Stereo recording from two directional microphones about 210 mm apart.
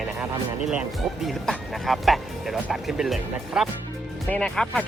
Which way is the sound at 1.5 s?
Centre (ahead or behind).